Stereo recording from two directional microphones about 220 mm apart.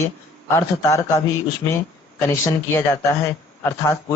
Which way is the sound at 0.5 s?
15° left (ahead or behind).